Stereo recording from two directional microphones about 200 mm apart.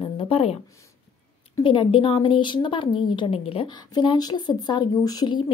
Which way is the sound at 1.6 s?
25° left (ahead or behind).